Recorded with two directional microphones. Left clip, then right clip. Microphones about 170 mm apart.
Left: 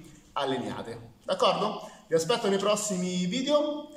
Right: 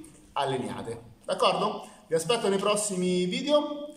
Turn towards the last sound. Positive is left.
turn(degrees=-5)  # may be behind; listen again after turning